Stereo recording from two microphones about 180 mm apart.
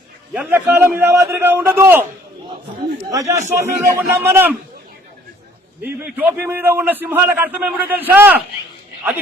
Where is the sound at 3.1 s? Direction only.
15° right (ahead or behind).